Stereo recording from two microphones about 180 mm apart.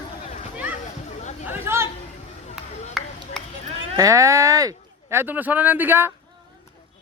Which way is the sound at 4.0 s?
20° right (ahead or behind).